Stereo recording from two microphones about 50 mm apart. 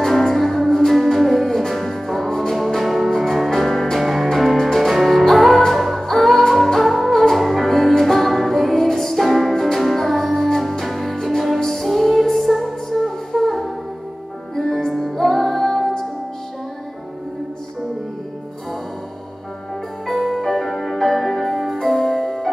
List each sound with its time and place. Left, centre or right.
0.0 s music: centre
20.1 s music: centre